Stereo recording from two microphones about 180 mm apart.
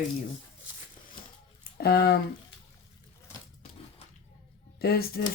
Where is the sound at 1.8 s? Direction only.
60° left (ahead or behind).